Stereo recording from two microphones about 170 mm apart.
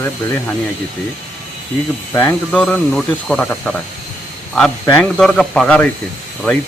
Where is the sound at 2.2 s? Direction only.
10° left (ahead or behind).